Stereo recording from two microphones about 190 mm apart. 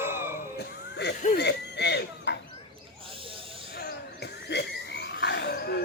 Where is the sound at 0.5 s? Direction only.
60° left (ahead or behind).